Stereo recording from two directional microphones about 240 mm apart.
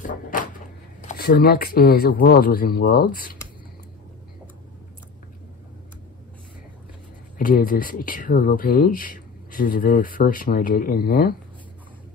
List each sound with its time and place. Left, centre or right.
0.0 s cupboard open or close: left
1.0 s speech: left
7.3 s speech: left